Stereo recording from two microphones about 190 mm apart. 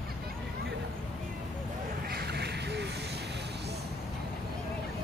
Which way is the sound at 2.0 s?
55° right (ahead or behind).